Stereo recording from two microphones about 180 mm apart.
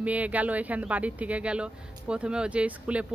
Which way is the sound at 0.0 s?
10° right (ahead or behind).